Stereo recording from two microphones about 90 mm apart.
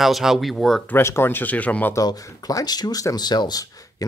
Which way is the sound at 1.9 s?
40° left (ahead or behind).